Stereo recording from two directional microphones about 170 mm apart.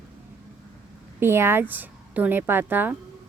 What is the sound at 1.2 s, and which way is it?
Speech, 15° right (ahead or behind).